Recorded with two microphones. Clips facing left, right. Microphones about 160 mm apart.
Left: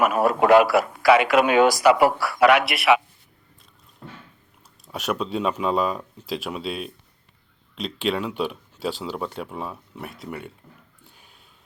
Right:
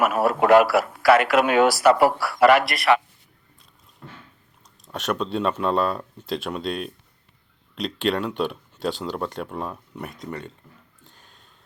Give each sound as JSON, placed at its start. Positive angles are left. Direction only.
{"t": 0.0, "sound": "speech", "side_deg": -5}
{"t": 4.9, "sound": "speech", "side_deg": 10}
{"t": 11.0, "sound": "a sound", "side_deg": 10}